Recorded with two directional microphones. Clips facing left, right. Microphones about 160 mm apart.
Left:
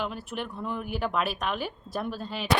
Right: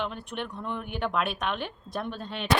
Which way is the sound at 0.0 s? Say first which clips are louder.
Even; 5° left (ahead or behind).